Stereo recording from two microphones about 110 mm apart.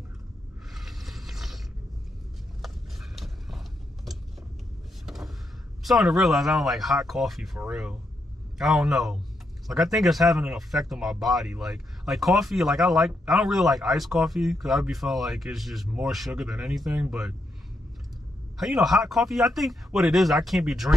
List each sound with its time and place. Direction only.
0.7 s a sound: centre (ahead or behind)
2.6 s mechanisms: centre (ahead or behind)
5.0 s vehicle: centre (ahead or behind)
5.9 s speech: centre (ahead or behind)
18.6 s speech: centre (ahead or behind)